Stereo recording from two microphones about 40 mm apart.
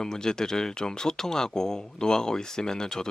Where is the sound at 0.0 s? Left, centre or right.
Centre.